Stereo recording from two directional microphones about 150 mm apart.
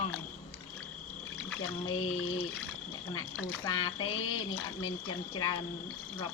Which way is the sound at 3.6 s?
30° left (ahead or behind).